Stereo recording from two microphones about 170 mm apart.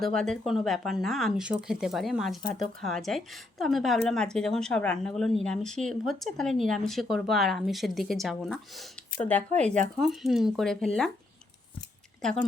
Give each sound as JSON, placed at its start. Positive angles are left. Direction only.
{"t": 0.0, "sound": "a woman's voice", "side_deg": 5}
{"t": 9.6, "sound": "speech", "side_deg": -45}
{"t": 10.0, "sound": "a woman's voice", "side_deg": 0}
{"t": 12.2, "sound": "a woman's voice", "side_deg": 5}